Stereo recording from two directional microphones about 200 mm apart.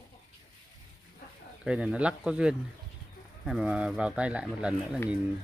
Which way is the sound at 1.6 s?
5° right (ahead or behind).